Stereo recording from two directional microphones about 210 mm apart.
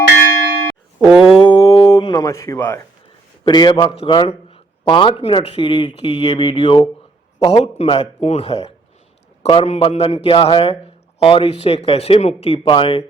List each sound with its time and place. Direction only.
0.9 s a sound: 5° right (ahead or behind)
1.4 s music: 20° left (ahead or behind)
3.4 s a man's voice: 20° left (ahead or behind)